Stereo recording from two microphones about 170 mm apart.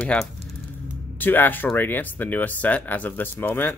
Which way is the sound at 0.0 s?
5° left (ahead or behind).